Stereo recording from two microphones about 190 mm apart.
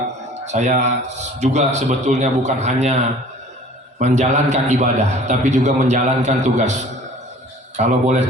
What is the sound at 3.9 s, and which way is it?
A man's voice, 35° right (ahead or behind).